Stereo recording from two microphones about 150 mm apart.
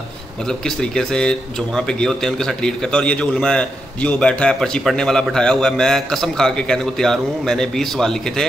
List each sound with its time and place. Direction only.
0.5 s a man's voice: 5° left (ahead or behind)